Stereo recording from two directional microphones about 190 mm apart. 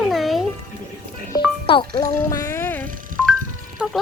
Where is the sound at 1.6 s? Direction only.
25° left (ahead or behind).